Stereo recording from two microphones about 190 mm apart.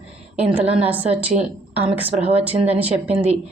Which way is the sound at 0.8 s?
10° right (ahead or behind).